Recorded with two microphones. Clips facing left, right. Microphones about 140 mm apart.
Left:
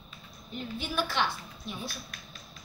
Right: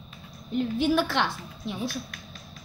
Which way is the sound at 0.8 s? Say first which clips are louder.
Right 6 dB; 75° right (ahead or behind).